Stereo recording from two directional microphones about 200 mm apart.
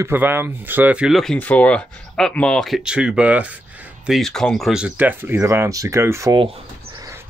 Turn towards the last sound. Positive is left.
turn(degrees=-25)  # may be behind; listen again after turning